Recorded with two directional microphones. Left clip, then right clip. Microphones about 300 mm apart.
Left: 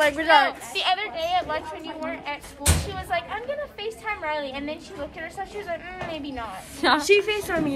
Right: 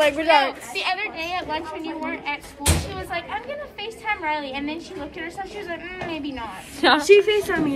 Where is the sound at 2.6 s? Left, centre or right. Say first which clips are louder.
Right 1 dB; centre.